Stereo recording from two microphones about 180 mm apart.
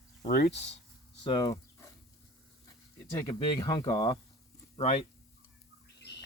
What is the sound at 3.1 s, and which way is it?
Speech, 25° left (ahead or behind).